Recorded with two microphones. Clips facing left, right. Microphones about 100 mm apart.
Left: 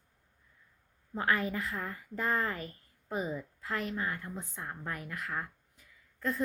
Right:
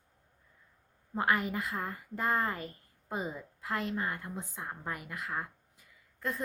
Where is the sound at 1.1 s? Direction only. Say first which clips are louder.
Right 1 dB; 20° right (ahead or behind).